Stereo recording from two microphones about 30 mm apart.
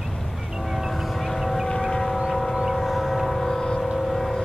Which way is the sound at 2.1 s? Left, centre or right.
Centre.